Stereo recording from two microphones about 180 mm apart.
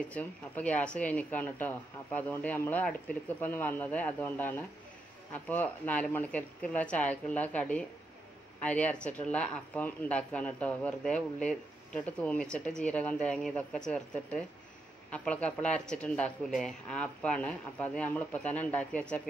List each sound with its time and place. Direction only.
0.1 s speech: 5° left (ahead or behind)